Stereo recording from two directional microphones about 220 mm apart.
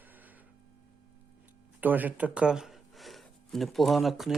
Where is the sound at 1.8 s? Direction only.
10° right (ahead or behind).